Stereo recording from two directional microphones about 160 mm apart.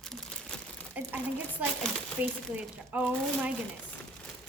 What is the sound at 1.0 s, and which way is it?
Speech, 10° right (ahead or behind).